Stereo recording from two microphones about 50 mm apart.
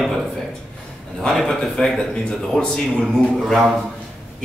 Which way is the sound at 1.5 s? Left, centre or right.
Centre.